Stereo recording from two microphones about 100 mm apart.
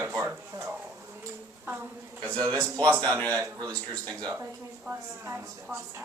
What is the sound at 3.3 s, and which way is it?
Speech, 35° right (ahead or behind).